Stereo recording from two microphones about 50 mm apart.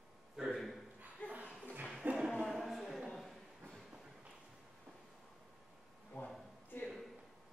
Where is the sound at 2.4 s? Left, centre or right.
Centre.